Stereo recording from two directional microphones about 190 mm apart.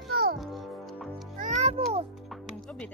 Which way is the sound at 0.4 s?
Centre (ahead or behind).